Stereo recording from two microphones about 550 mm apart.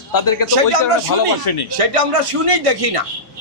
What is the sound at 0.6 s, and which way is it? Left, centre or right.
Speech, right.